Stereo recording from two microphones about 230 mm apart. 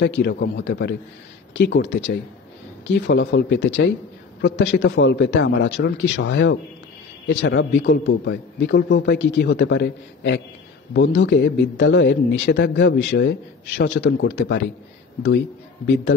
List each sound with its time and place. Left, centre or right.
0.0 s a man's voice: left